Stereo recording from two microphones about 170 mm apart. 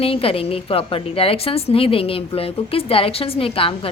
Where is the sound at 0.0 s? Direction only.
35° left (ahead or behind).